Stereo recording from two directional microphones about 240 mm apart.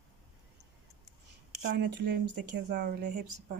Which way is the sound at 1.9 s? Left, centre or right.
Right.